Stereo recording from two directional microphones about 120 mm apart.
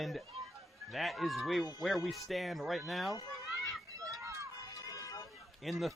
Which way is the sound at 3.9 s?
30° right (ahead or behind).